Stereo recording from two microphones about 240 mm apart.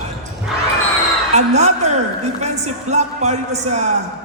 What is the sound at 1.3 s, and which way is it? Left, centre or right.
A woman's voice, right.